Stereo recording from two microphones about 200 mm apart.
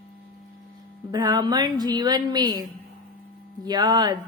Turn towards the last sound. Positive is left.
turn(degrees=-20)  # may be behind; listen again after turning